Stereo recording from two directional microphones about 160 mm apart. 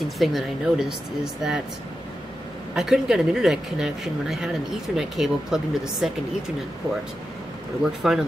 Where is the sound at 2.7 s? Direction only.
5° right (ahead or behind).